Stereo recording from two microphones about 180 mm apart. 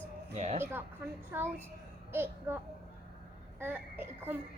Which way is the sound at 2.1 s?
10° right (ahead or behind).